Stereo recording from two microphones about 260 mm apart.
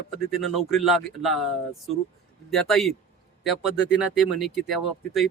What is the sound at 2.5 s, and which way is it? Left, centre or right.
Speech, centre.